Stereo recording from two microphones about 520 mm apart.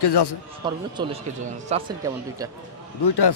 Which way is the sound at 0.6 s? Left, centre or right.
Centre.